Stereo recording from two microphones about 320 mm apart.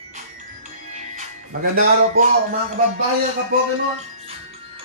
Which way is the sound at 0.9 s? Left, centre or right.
Right.